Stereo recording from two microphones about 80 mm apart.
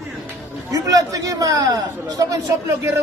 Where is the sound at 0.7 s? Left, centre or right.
Right.